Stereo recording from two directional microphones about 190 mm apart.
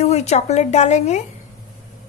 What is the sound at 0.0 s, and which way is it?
Speech, 35° left (ahead or behind).